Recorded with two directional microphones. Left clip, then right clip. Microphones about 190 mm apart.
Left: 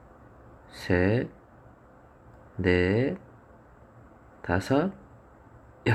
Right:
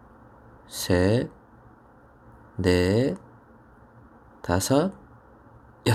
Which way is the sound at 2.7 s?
25° right (ahead or behind).